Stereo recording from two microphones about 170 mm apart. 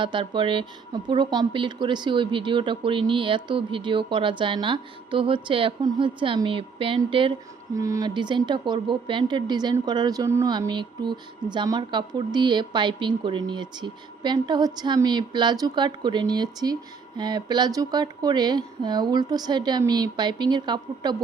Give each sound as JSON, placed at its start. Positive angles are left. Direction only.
{"t": 0.0, "sound": "speech", "side_deg": -30}